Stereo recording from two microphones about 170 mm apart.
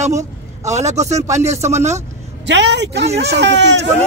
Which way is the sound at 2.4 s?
90° right.